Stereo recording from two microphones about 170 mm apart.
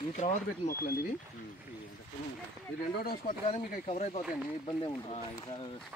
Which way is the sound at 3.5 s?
40° left (ahead or behind).